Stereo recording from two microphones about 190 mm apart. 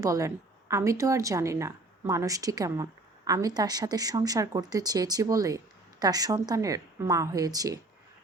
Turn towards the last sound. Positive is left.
turn(degrees=-20)  # may be behind; listen again after turning